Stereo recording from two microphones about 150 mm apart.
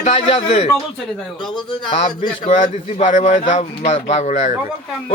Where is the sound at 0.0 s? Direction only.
45° left (ahead or behind).